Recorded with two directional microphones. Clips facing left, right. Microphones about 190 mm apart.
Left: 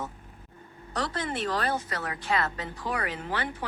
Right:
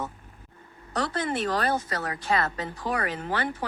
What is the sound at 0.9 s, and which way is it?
A woman's voice, 50° right (ahead or behind).